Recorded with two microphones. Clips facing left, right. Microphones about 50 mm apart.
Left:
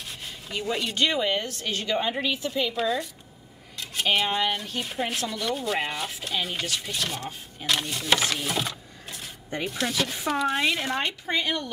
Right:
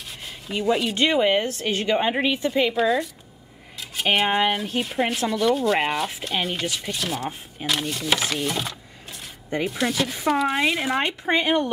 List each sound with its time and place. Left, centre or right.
0.0 s rub: centre
0.9 s a woman's voice: right
2.5 s a woman's voice: centre
2.8 s sanding: centre
3.7 s cutlery: centre
4.7 s sanding: centre
7.6 s speech: centre
9.7 s sanding: centre
11.2 s a woman's voice: right